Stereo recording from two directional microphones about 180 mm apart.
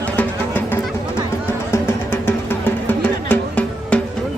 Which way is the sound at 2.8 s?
10° left (ahead or behind).